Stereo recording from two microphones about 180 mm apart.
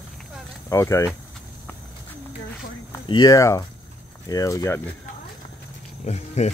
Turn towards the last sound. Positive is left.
turn(degrees=40)  # may be behind; listen again after turning